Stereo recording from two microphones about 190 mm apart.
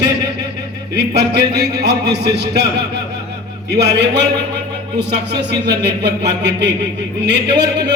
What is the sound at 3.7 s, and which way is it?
Speech, 65° right (ahead or behind).